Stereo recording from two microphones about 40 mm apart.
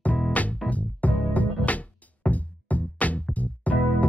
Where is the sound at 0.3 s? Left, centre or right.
Left.